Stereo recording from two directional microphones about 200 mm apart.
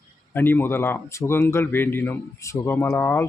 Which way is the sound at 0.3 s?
10° left (ahead or behind).